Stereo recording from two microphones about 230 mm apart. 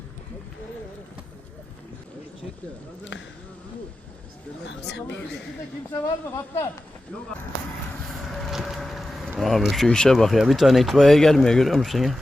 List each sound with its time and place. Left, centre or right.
3.0 s speech: left
4.6 s speech: left
5.9 s speech: centre
8.0 s speech: centre